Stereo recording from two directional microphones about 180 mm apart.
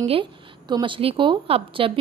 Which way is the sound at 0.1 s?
25° right (ahead or behind).